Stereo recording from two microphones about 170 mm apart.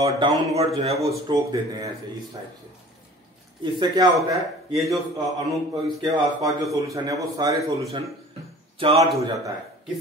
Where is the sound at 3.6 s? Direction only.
30° right (ahead or behind).